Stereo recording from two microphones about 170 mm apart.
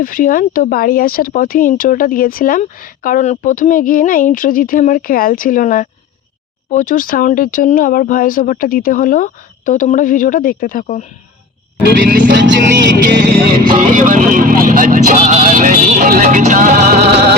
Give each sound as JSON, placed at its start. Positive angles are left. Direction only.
{"t": 0.0, "sound": "speech", "side_deg": 55}
{"t": 12.0, "sound": "speech", "side_deg": -55}
{"t": 12.3, "sound": "vehicle", "side_deg": -90}
{"t": 13.7, "sound": "speech", "side_deg": -50}